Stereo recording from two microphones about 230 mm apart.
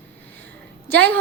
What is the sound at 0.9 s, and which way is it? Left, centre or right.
Speech, centre.